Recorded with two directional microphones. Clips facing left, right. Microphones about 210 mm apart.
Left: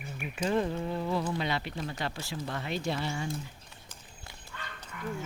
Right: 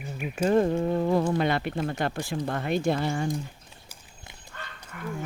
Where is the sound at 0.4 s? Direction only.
45° right (ahead or behind).